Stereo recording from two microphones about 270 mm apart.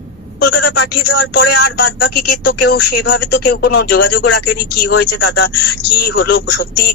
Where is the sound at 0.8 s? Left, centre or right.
Left.